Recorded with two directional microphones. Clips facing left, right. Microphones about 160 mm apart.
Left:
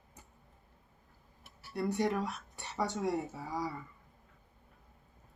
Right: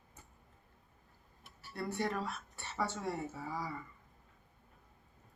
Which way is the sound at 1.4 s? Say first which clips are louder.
Left 6 dB; 15° left (ahead or behind).